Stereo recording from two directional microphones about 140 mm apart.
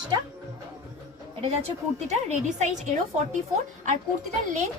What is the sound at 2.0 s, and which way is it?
Speech, 55° right (ahead or behind).